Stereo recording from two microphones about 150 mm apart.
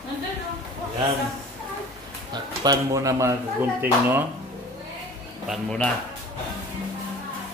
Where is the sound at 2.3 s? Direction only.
25° right (ahead or behind).